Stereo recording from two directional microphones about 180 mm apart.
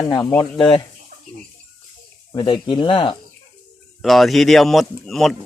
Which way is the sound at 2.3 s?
25° left (ahead or behind).